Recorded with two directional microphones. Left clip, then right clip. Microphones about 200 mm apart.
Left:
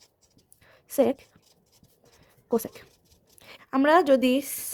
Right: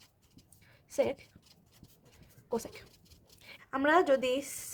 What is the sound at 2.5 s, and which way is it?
Speech, 45° left (ahead or behind).